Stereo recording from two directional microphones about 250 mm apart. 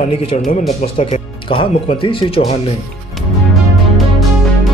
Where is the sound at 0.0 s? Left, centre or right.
Left.